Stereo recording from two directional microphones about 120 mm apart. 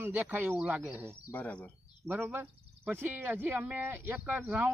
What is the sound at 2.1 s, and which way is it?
Speech, 15° right (ahead or behind).